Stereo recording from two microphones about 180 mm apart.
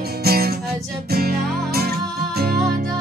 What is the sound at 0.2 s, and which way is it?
Music, 60° right (ahead or behind).